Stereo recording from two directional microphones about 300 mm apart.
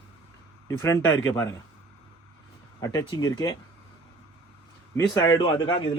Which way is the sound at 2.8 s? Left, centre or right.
Centre.